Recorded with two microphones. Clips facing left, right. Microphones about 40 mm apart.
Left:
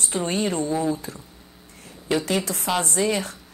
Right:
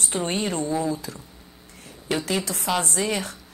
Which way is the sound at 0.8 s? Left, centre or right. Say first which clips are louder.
Left 2 dB; left.